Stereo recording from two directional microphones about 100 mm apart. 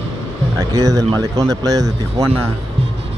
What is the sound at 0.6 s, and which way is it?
Speech, 35° right (ahead or behind).